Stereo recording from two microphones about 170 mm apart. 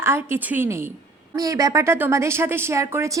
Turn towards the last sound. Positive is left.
turn(degrees=-15)  # may be behind; listen again after turning